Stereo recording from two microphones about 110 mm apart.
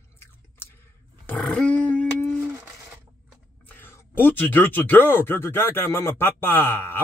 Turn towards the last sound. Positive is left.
turn(degrees=20)  # may be behind; listen again after turning